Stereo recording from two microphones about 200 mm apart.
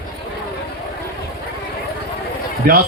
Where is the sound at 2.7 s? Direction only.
45° right (ahead or behind).